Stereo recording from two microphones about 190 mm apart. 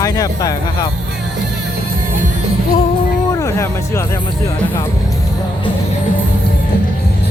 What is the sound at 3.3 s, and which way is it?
Speech, 15° left (ahead or behind).